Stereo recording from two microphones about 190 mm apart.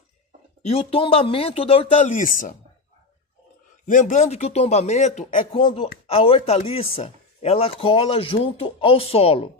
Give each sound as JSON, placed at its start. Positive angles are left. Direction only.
{"t": 0.7, "sound": "speech", "side_deg": 30}
{"t": 3.8, "sound": "speech", "side_deg": 40}
{"t": 5.5, "sound": "speech", "side_deg": 25}